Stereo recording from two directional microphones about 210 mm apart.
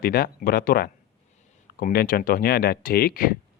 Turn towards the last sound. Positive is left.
turn(degrees=45)  # may be behind; listen again after turning